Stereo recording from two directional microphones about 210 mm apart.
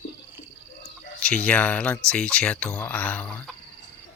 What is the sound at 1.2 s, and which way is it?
Speech, 5° left (ahead or behind).